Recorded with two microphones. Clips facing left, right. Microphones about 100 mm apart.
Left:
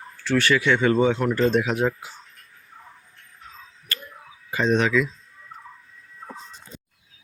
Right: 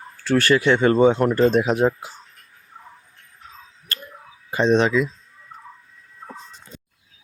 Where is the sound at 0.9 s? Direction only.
50° right (ahead or behind); by 2.1 s 35° right (ahead or behind).